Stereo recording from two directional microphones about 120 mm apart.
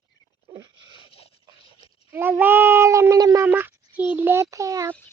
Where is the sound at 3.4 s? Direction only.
15° right (ahead or behind).